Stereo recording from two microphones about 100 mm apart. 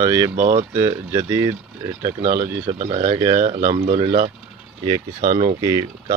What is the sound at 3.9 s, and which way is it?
Speech, 65° right (ahead or behind).